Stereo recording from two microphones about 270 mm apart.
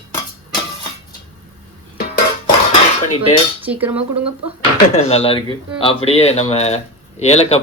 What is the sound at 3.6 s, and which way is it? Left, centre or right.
Speech, centre.